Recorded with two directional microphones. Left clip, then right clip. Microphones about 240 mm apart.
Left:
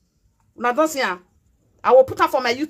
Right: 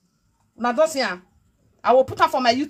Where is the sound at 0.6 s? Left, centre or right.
Left.